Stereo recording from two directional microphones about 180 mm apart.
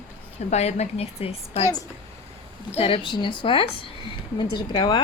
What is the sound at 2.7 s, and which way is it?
A woman's voice, 30° left (ahead or behind).